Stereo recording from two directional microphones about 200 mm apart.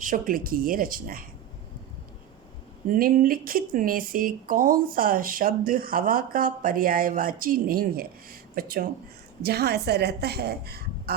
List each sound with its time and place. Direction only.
0.0 s speech: 40° right (ahead or behind)
2.8 s speech: 45° right (ahead or behind)